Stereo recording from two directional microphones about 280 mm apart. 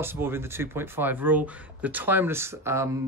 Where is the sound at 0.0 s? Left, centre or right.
Centre.